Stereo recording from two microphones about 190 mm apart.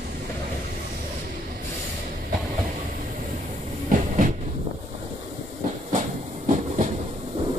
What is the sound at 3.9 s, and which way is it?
Train, 40° right (ahead or behind).